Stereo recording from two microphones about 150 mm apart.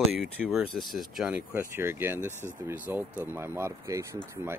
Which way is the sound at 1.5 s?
15° right (ahead or behind).